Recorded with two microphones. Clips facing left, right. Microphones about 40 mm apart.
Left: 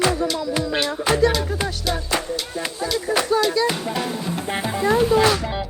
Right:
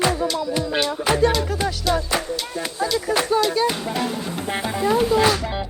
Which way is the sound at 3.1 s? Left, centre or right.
Right.